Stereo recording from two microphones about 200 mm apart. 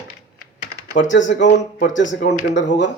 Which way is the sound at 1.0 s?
65° left (ahead or behind).